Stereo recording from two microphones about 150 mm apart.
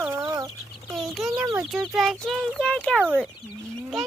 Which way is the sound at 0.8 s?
Centre (ahead or behind).